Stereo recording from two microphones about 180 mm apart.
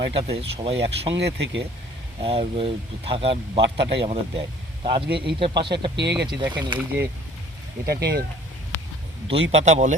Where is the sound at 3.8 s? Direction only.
70° right (ahead or behind).